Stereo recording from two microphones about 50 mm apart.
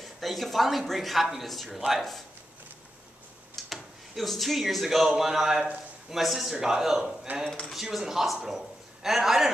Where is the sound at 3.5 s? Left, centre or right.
Centre.